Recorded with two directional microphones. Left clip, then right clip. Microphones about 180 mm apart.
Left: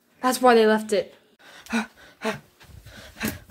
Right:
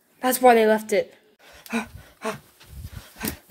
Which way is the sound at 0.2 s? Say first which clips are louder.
Right 1 dB; 15° right (ahead or behind).